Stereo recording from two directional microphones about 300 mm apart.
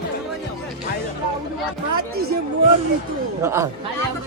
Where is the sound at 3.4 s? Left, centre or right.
Centre.